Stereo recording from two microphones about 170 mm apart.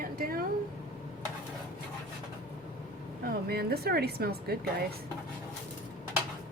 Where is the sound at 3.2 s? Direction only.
65° right (ahead or behind).